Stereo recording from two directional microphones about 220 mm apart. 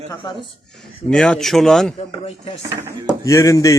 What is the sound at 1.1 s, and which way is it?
Speech, 5° left (ahead or behind).